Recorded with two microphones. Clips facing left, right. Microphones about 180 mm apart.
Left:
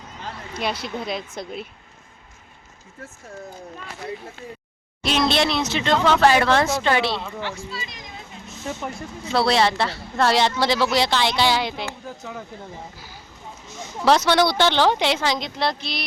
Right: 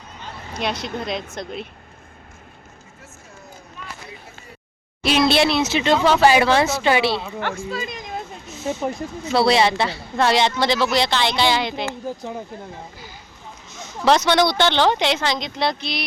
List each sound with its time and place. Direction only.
0.9 s speech: 5° left (ahead or behind)
5.0 s speech: 5° right (ahead or behind)
7.4 s speech: 50° right (ahead or behind)
9.3 s speech: centre (ahead or behind)
11.9 s speech: 30° right (ahead or behind)
13.7 s speech: 10° left (ahead or behind)